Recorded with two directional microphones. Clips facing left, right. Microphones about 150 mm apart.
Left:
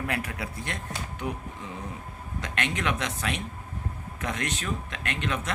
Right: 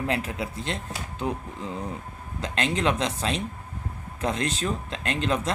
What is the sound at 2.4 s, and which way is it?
Speech, 30° right (ahead or behind).